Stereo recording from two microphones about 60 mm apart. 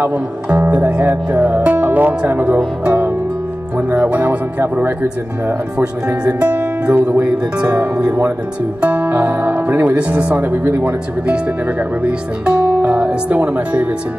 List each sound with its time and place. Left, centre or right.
0.0 s music: right
3.7 s speech: right
5.8 s music: right
7.0 s speech: right
7.5 s music: centre
9.7 s speech: right
9.9 s music: centre
10.4 s speech: right
10.8 s music: centre